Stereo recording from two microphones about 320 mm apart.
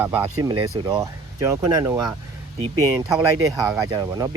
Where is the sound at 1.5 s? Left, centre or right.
Centre.